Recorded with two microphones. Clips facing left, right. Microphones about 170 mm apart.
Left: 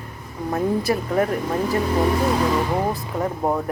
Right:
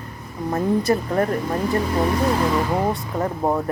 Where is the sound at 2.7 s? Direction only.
Centre (ahead or behind).